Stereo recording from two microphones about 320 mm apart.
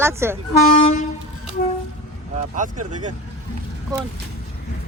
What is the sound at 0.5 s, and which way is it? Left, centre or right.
Speech, left.